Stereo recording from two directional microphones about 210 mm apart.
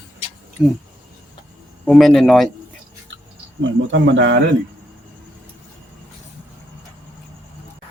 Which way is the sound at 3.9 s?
60° right (ahead or behind).